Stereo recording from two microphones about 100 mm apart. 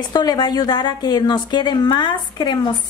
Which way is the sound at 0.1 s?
45° left (ahead or behind).